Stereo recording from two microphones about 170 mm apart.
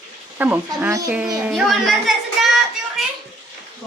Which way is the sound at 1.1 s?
10° right (ahead or behind).